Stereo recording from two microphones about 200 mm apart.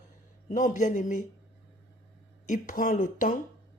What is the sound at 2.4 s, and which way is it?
Speech, 40° left (ahead or behind).